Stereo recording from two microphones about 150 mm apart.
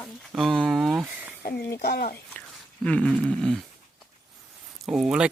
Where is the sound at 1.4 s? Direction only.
90° left.